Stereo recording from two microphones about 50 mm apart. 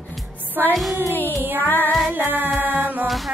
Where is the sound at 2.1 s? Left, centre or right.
Right.